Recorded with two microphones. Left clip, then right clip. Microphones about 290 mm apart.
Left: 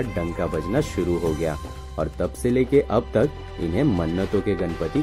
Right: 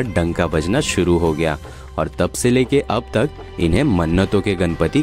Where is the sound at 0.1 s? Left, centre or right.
Right.